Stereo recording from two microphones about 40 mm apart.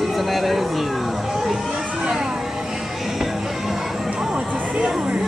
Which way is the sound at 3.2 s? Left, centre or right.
Centre.